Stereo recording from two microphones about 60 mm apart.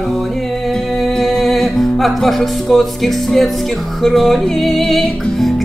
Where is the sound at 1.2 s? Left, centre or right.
Centre.